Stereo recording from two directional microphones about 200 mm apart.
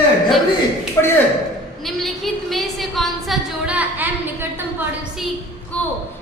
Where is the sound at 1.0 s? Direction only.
15° left (ahead or behind).